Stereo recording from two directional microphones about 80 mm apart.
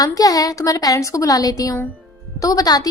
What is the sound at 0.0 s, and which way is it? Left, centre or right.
A woman's voice, left.